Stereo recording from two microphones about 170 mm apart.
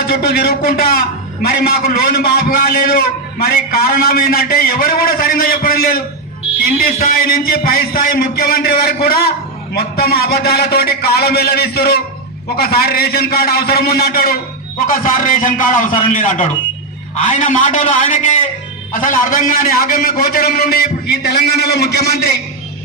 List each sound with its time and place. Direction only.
0.1 s a man's voice: 65° left (ahead or behind)